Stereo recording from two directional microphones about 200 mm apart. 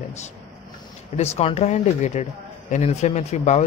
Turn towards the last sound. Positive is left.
turn(degrees=35)  # may be behind; listen again after turning